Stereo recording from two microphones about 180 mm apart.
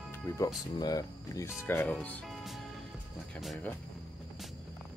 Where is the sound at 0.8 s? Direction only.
20° left (ahead or behind); by 3.7 s 5° left (ahead or behind).